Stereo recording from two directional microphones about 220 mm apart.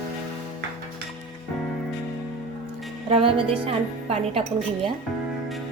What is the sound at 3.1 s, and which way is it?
A woman's voice, 25° right (ahead or behind).